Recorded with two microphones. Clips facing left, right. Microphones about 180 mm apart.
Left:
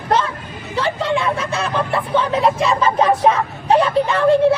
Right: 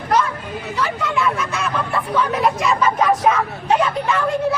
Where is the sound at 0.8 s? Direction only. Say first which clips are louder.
Left 3 dB; 30° left (ahead or behind).